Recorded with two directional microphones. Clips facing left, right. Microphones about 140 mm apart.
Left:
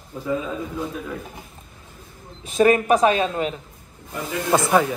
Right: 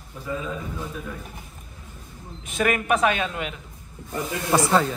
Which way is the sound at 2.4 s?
35° left (ahead or behind).